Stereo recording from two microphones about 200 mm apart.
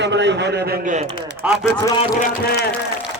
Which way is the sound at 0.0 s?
60° right (ahead or behind).